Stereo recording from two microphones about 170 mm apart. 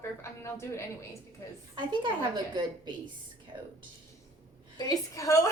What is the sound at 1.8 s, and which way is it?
A woman's voice, 30° right (ahead or behind).